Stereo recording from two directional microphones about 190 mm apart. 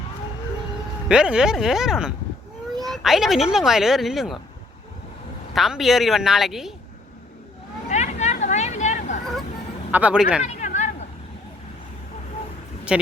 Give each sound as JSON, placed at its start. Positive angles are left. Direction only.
{"t": 1.0, "sound": "speech", "side_deg": -5}
{"t": 5.5, "sound": "speech", "side_deg": 0}
{"t": 7.9, "sound": "vehicle", "side_deg": 35}
{"t": 9.9, "sound": "speech", "side_deg": -5}
{"t": 10.4, "sound": "a sound", "side_deg": 40}
{"t": 12.9, "sound": "speech", "side_deg": -5}